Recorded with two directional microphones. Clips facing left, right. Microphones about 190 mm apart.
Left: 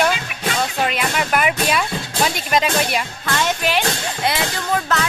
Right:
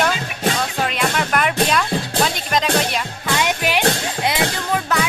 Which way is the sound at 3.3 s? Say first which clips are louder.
Even; 15° right (ahead or behind).